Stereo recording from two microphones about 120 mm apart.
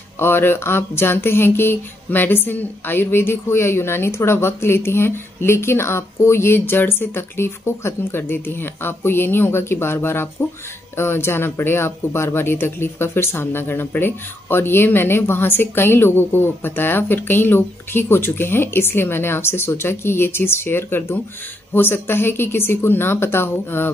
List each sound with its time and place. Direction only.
0.2 s speech: 20° left (ahead or behind)